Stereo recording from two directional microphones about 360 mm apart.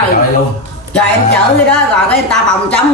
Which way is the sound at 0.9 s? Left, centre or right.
Centre.